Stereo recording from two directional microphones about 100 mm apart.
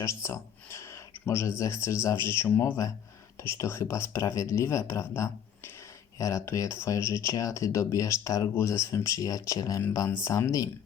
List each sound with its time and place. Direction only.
0.0 s speech: 30° left (ahead or behind)